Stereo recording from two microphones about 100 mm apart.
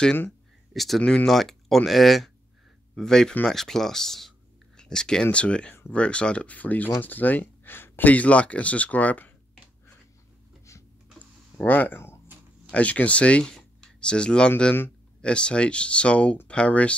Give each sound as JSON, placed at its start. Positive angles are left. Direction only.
{"t": 0.7, "sound": "speech", "side_deg": 0}
{"t": 10.7, "sound": "a sound", "side_deg": 30}
{"t": 11.6, "sound": "speech", "side_deg": 20}